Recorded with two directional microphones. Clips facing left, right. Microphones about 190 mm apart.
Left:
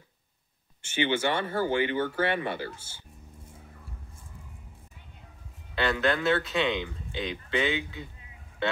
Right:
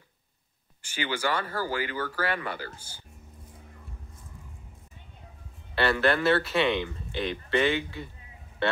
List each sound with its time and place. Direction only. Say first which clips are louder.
0.8 s speech: left 3 dB; 25° left (ahead or behind)
5.8 s speech: right 2 dB; 5° right (ahead or behind)